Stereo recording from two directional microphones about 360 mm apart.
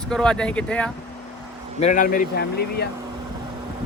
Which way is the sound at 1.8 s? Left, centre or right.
Left.